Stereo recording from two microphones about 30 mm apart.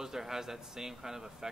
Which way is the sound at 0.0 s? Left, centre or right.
Centre.